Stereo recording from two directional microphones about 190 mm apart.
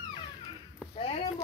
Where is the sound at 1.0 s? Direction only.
30° left (ahead or behind).